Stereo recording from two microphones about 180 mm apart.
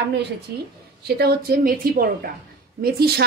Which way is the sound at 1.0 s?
60° right (ahead or behind).